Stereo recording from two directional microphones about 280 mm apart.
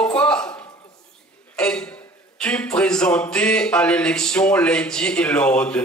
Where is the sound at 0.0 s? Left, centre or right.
Centre.